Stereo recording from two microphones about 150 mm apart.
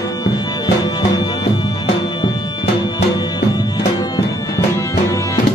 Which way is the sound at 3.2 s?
25° left (ahead or behind).